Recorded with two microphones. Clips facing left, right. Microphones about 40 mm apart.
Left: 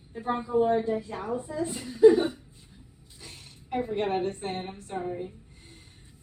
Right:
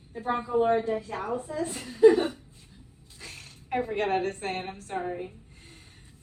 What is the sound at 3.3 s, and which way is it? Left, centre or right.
A woman's voice, right.